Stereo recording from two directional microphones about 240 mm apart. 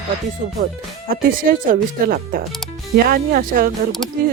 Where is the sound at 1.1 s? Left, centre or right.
Right.